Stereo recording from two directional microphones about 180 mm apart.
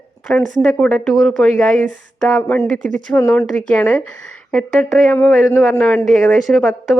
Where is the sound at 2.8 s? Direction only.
45° right (ahead or behind).